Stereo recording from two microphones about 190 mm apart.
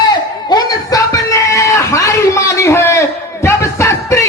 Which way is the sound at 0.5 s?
20° left (ahead or behind).